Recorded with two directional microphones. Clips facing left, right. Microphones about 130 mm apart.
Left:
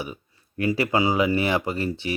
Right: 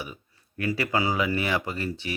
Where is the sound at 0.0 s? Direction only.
30° left (ahead or behind).